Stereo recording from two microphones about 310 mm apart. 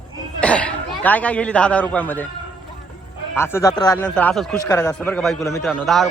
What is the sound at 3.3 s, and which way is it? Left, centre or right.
A man's voice, centre.